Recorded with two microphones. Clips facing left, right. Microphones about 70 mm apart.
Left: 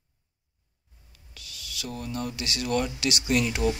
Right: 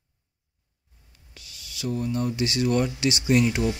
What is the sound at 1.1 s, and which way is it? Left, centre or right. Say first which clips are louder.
Speech: left 2 dB; right.